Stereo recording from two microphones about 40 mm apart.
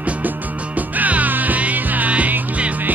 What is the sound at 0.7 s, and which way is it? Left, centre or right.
Music, right.